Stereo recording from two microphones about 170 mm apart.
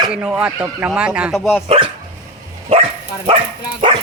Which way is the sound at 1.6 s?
35° right (ahead or behind).